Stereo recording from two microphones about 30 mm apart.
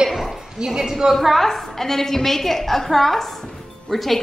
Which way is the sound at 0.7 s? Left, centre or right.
Centre.